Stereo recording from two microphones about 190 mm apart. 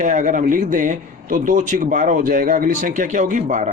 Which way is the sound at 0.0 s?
40° right (ahead or behind).